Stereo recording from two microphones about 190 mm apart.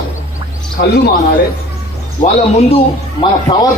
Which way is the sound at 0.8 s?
55° left (ahead or behind).